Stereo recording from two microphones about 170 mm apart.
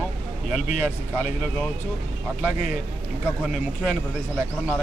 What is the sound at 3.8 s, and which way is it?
Speech, 5° left (ahead or behind).